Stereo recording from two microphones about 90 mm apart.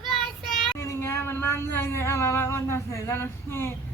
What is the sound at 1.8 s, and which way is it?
A woman's voice, 30° left (ahead or behind).